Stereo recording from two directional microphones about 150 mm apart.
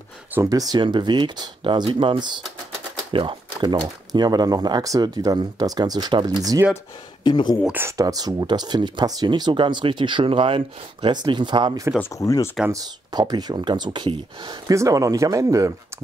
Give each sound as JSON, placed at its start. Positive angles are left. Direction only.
{"t": 0.3, "sound": "speech", "side_deg": -20}
{"t": 7.2, "sound": "speech", "side_deg": 30}
{"t": 7.6, "sound": "speech", "side_deg": -15}
{"t": 8.0, "sound": "speech", "side_deg": -25}
{"t": 12.0, "sound": "speech", "side_deg": 20}
{"t": 12.6, "sound": "speech", "side_deg": -25}